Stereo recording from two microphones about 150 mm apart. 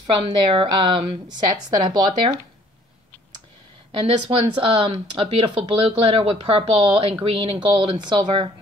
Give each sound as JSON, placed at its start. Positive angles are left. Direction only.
{"t": 0.0, "sound": "speech", "side_deg": -35}
{"t": 4.0, "sound": "speech", "side_deg": -35}